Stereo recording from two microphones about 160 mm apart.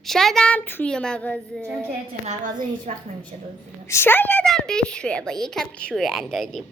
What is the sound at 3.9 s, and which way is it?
A woman's voice, 15° left (ahead or behind).